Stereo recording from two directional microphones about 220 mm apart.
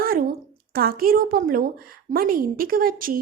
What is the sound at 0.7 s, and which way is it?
A woman's voice, 40° right (ahead or behind).